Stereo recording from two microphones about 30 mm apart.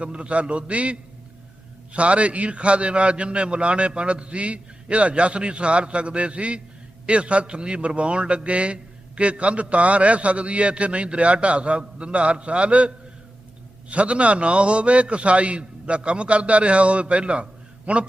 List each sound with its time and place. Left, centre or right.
0.0 s a man's voice: right
13.9 s a man's voice: right